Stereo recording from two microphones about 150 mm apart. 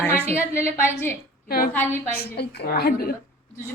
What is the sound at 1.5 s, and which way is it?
Speech, 80° left.